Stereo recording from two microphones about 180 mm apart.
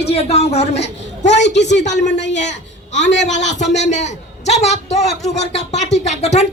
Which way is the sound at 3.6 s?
40° left (ahead or behind).